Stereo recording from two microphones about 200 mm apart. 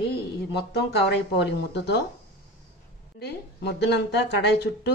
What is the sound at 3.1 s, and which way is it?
Speech, 55° left (ahead or behind).